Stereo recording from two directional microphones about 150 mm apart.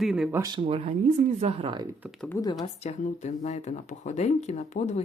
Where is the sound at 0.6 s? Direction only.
40° right (ahead or behind).